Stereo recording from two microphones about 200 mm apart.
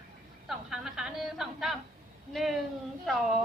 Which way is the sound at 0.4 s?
Centre (ahead or behind).